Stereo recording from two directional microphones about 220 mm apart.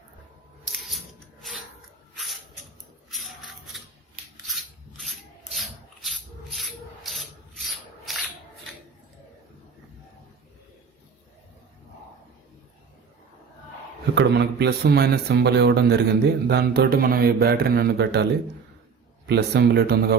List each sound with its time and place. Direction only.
0.9 s a sound: centre (ahead or behind)
3.1 s a sound: centre (ahead or behind)
4.4 s rub: centre (ahead or behind)
8.1 s scissors: centre (ahead or behind)
14.2 s speech: 50° right (ahead or behind)
19.3 s speech: 50° right (ahead or behind)